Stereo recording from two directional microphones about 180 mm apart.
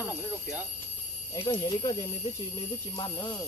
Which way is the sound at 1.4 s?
25° left (ahead or behind).